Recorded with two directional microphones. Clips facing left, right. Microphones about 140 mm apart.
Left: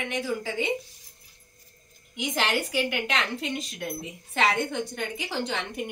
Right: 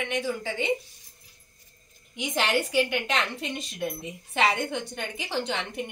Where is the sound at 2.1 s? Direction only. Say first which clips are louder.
Right 1 dB; centre (ahead or behind).